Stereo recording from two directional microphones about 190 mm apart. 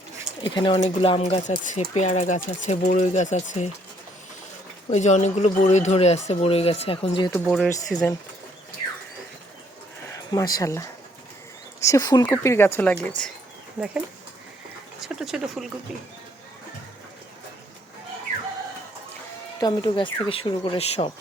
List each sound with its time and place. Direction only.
0.4 s speech: 25° left (ahead or behind)
4.9 s speech: 35° left (ahead or behind)
7.3 s speech: 5° left (ahead or behind)
10.1 s speech: 20° left (ahead or behind)
15.0 s speech: centre (ahead or behind)
19.5 s speech: 20° left (ahead or behind)